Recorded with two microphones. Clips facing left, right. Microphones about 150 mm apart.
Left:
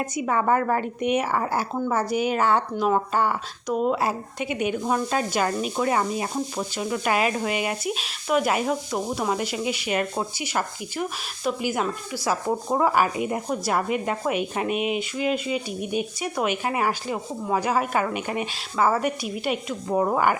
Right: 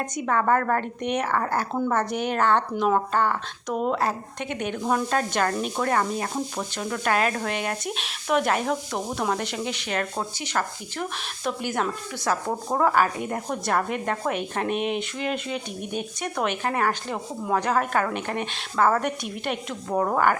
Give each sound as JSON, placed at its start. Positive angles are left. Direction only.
{"t": 0.0, "sound": "speech", "side_deg": 5}